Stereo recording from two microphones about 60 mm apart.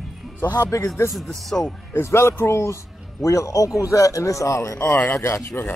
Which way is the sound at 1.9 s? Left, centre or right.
Left.